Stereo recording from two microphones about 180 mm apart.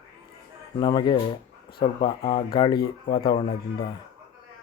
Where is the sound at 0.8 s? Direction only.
25° left (ahead or behind).